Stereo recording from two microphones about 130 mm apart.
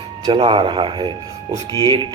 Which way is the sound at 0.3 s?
40° right (ahead or behind).